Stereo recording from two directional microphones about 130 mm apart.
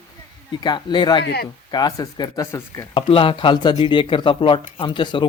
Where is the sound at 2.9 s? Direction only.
40° left (ahead or behind).